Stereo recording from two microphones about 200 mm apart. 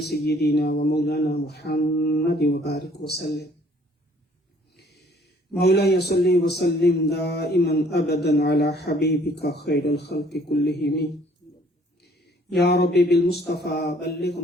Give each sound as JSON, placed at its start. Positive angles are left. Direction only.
{"t": 0.0, "sound": "speech", "side_deg": 55}
{"t": 4.8, "sound": "a sound", "side_deg": 55}
{"t": 6.5, "sound": "speech", "side_deg": 55}
{"t": 12.5, "sound": "speech", "side_deg": 55}